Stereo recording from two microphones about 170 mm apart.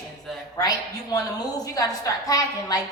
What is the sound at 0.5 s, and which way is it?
A woman's voice, 20° left (ahead or behind).